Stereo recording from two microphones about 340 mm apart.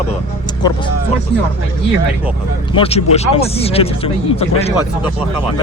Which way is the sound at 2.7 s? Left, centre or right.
Centre.